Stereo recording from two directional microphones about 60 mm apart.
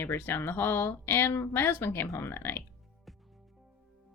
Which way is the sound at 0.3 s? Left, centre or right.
Left.